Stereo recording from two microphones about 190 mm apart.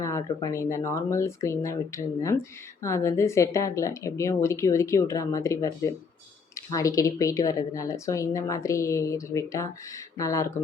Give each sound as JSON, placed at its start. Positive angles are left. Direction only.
{"t": 0.0, "sound": "a woman's voice", "side_deg": 15}